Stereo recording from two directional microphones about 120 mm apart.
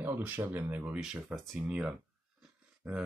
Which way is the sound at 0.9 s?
5° right (ahead or behind).